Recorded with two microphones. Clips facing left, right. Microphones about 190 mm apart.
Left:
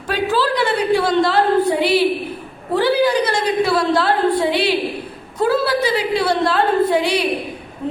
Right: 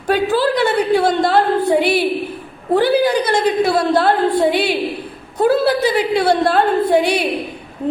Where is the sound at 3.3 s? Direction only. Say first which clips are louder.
Right 2 dB; 50° right (ahead or behind).